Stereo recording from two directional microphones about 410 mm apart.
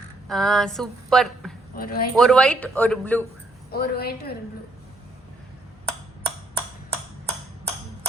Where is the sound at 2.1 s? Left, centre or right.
Centre.